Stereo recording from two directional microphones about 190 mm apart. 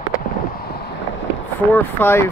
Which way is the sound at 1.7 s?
10° left (ahead or behind).